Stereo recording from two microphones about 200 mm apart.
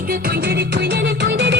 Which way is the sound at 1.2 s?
60° right (ahead or behind).